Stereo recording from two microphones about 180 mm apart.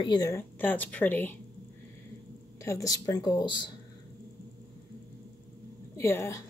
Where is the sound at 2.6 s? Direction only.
20° left (ahead or behind).